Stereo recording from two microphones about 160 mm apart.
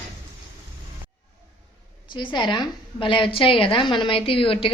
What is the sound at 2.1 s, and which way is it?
Speech, 30° left (ahead or behind).